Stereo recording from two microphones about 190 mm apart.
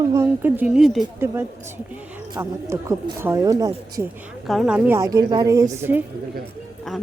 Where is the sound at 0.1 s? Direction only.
10° right (ahead or behind).